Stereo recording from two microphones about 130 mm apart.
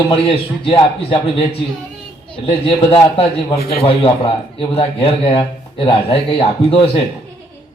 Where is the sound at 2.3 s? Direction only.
40° left (ahead or behind).